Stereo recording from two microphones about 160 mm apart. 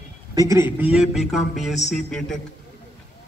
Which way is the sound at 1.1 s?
Centre (ahead or behind).